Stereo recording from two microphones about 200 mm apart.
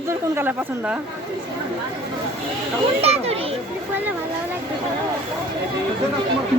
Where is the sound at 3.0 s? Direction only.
30° right (ahead or behind).